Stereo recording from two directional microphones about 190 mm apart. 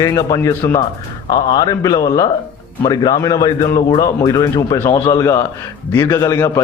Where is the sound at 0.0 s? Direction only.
20° left (ahead or behind).